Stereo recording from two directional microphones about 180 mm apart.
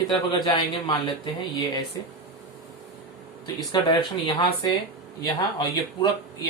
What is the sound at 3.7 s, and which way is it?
Speech, 25° left (ahead or behind).